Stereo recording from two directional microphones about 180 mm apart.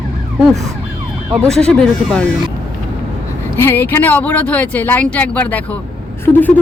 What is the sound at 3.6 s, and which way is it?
Speech, 10° left (ahead or behind).